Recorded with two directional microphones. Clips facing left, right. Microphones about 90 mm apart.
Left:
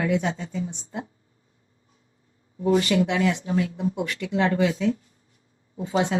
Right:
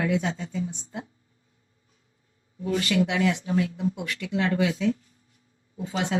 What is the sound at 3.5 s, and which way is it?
Speech, 45° left (ahead or behind).